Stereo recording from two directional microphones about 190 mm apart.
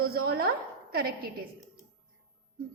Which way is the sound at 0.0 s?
50° right (ahead or behind).